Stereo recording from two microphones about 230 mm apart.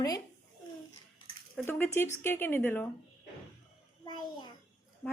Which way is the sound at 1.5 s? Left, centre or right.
Centre.